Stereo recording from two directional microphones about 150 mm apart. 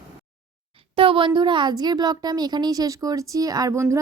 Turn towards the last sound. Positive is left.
turn(degrees=-20)  # may be behind; listen again after turning